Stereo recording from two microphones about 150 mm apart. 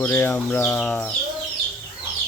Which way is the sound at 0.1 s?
15° left (ahead or behind).